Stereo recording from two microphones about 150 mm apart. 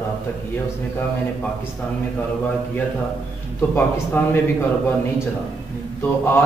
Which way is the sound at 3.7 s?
15° left (ahead or behind).